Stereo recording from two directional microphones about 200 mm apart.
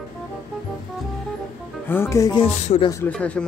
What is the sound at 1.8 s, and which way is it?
Speech, 10° left (ahead or behind).